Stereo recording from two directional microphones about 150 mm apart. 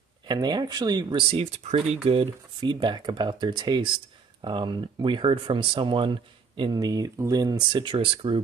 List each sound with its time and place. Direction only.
0.3 s speech: 30° right (ahead or behind)
1.3 s speech: 45° right (ahead or behind)